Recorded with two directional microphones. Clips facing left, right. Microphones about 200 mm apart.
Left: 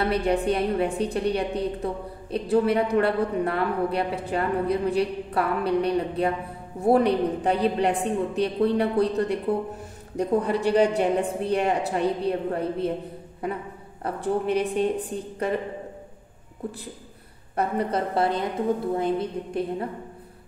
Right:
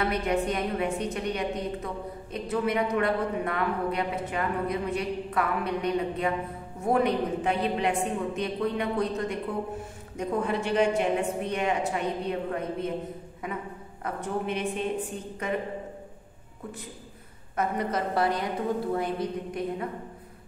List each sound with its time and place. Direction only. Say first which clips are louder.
0.0 s speech: left 4 dB; 35° left (ahead or behind)
17.6 s a woman's voice: left 3 dB; 30° left (ahead or behind)